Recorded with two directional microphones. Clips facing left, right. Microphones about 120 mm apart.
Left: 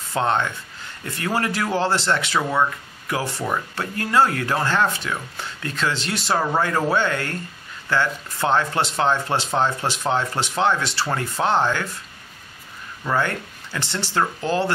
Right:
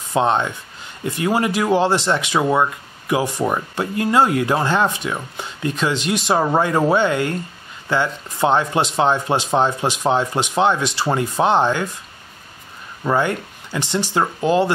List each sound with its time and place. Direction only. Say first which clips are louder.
0.1 s speech: right 4 dB; 15° right (ahead or behind)
13.0 s speech: right 4 dB; 15° right (ahead or behind)